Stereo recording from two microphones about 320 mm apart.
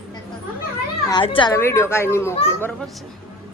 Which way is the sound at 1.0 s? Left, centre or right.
Centre.